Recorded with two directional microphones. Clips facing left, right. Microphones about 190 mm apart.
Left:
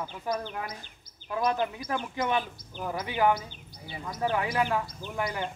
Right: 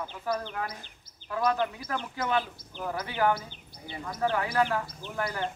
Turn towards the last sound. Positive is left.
turn(degrees=15)  # may be behind; listen again after turning